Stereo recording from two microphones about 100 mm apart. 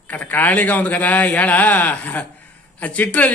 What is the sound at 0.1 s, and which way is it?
A man's voice, 15° left (ahead or behind).